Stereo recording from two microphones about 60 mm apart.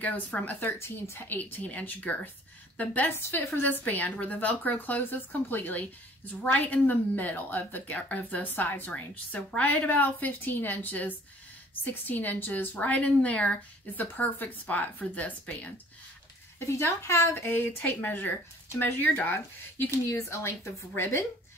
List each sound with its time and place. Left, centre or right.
0.3 s speech: centre
0.7 s a woman's voice: left
7.9 s a woman's voice: left
16.5 s a woman's voice: left
18.0 s speech: left
20.1 s a woman's voice: left